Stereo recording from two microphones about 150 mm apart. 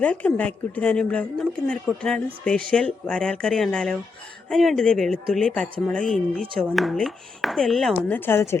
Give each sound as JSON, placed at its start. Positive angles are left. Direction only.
{"t": 0.0, "sound": "speech", "side_deg": 10}